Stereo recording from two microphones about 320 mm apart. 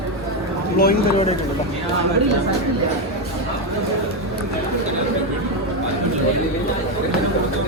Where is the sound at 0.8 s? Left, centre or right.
Left.